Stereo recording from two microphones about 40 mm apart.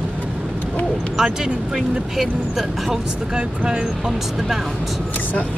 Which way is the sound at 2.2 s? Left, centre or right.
Centre.